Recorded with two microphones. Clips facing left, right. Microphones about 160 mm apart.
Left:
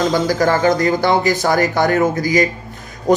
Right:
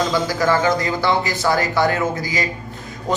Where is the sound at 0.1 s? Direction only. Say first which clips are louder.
Left 3 dB; 45° left (ahead or behind).